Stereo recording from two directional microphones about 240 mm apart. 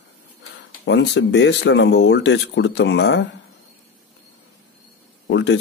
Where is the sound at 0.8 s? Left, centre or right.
Left.